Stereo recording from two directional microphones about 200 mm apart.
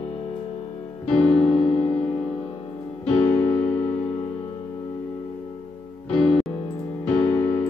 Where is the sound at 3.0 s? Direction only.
5° left (ahead or behind).